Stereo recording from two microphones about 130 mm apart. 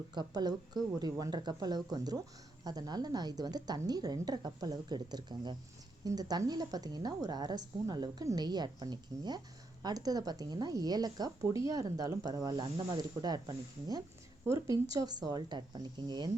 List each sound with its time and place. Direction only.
0.1 s a woman's voice: 35° right (ahead or behind)